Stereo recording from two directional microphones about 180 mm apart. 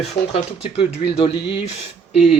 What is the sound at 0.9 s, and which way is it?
Speech, 70° left (ahead or behind).